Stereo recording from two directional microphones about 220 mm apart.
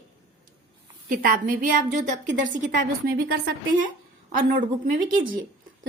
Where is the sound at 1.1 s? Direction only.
40° right (ahead or behind).